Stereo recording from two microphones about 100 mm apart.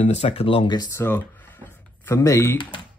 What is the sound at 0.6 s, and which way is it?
Speech, 40° left (ahead or behind).